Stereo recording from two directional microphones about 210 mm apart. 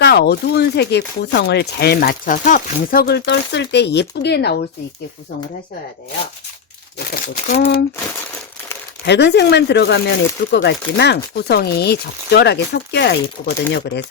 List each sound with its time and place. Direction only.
0.0 s speech: 50° left (ahead or behind)
7.1 s speech: 40° left (ahead or behind)
9.0 s speech: 55° left (ahead or behind)